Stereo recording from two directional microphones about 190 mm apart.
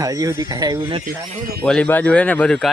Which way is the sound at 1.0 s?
50° right (ahead or behind).